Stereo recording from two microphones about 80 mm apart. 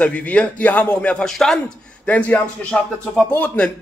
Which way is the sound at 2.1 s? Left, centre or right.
Centre.